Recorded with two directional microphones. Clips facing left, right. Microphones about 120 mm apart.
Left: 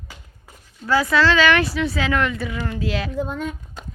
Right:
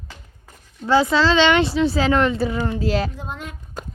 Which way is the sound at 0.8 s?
25° right (ahead or behind).